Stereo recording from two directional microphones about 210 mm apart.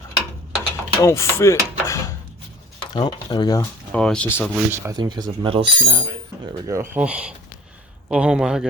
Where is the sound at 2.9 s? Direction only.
20° left (ahead or behind).